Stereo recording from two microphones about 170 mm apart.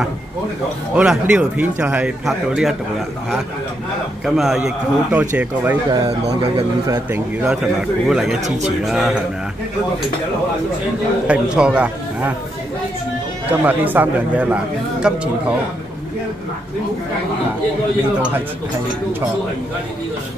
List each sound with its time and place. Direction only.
0.9 s a man's voice: 5° right (ahead or behind)
4.4 s a man's voice: centre (ahead or behind)
5.9 s speech: 30° right (ahead or behind)
7.4 s a man's voice: 5° right (ahead or behind)
11.2 s speech: 5° right (ahead or behind)
13.5 s speech: 10° right (ahead or behind)